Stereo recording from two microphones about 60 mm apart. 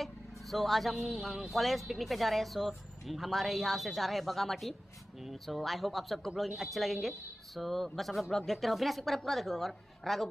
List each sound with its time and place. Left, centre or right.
0.0 s speech: centre